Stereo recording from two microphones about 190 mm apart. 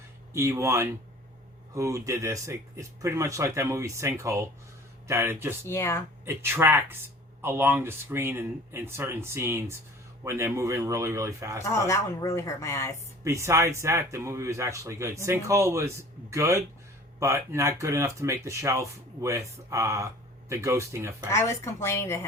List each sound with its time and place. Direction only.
0.3 s speech: 15° right (ahead or behind)
5.6 s speech: 15° left (ahead or behind)
6.2 s speech: 15° right (ahead or behind)
11.6 s speech: 15° left (ahead or behind)
13.2 s speech: 15° right (ahead or behind)
21.2 s speech: 15° left (ahead or behind)